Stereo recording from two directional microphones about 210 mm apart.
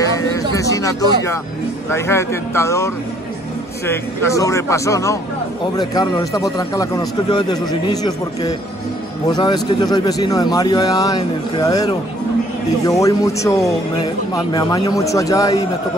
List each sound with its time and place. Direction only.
0.6 s a man's voice: 15° left (ahead or behind)
13.0 s a man's voice: 15° left (ahead or behind)